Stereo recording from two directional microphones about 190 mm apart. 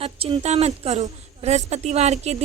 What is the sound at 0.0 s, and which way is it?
A woman's voice, 30° right (ahead or behind).